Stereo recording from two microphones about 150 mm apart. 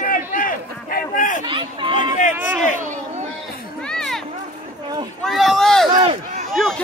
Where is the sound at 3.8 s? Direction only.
5° left (ahead or behind).